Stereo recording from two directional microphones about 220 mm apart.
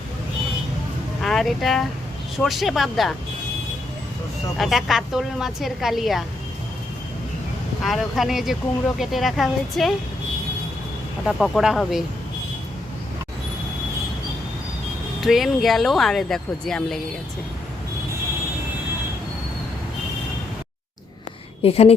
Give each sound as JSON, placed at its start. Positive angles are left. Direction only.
{"t": 1.2, "sound": "speech", "side_deg": 0}
{"t": 4.5, "sound": "speech", "side_deg": 0}
{"t": 7.9, "sound": "speech", "side_deg": 0}
{"t": 11.3, "sound": "speech", "side_deg": 0}
{"t": 15.2, "sound": "speech", "side_deg": 0}
{"t": 21.6, "sound": "a woman's voice", "side_deg": 25}